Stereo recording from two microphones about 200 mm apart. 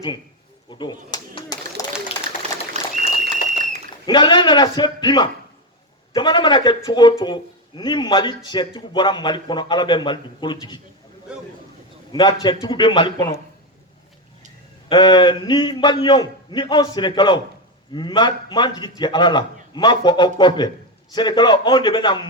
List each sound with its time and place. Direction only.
0.7 s a sound: 20° left (ahead or behind)
2.8 s applause: 35° right (ahead or behind)
3.5 s a sound: 40° right (ahead or behind)
4.0 s a man's voice: 20° left (ahead or behind)
11.3 s a man's voice: 5° right (ahead or behind)
12.1 s a man's voice: 25° left (ahead or behind)
14.8 s a man's voice: 20° left (ahead or behind)